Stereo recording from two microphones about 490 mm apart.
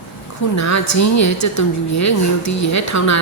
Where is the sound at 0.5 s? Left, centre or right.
Left.